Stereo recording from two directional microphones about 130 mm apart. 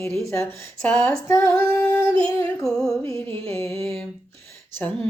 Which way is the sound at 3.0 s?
20° left (ahead or behind).